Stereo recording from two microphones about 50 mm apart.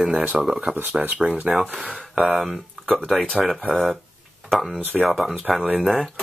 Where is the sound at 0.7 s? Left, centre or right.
Right.